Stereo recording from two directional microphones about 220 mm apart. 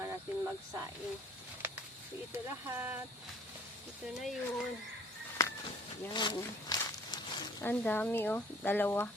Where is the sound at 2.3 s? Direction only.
10° right (ahead or behind).